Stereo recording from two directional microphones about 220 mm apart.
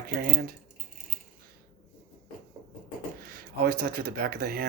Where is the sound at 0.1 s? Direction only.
45° right (ahead or behind).